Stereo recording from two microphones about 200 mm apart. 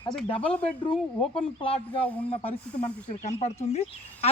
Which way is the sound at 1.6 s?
25° left (ahead or behind).